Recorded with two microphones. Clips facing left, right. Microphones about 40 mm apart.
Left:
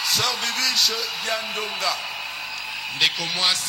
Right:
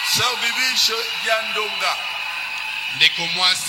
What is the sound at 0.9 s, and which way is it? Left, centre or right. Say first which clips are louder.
A man's voice: right 5 dB; right.